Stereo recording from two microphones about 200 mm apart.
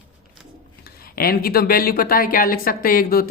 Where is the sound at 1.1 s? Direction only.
45° left (ahead or behind).